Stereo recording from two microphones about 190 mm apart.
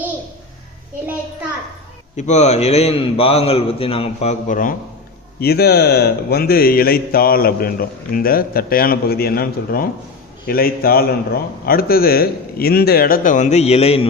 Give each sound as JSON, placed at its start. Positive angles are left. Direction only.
{"t": 2.1, "sound": "a man's voice", "side_deg": 35}
{"t": 5.4, "sound": "a man's voice", "side_deg": 55}